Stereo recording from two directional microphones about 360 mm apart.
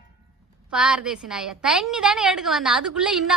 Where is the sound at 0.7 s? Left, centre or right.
Centre.